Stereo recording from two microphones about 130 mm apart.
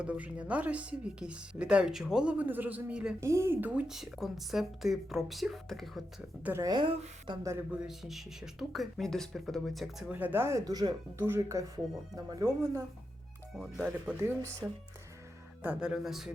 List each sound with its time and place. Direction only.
0.0 s speech: 10° right (ahead or behind)
3.2 s speech: 20° right (ahead or behind); by 6.0 s centre (ahead or behind)
6.6 s speech: 30° right (ahead or behind)
7.7 s speech: 5° right (ahead or behind)
10.1 s speech: 15° right (ahead or behind)
10.6 s speech: 30° right (ahead or behind)
13.6 s speech: 5° right (ahead or behind)
15.6 s speech: 10° right (ahead or behind)